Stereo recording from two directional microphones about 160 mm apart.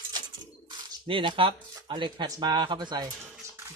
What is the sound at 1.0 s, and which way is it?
Speech, 30° right (ahead or behind).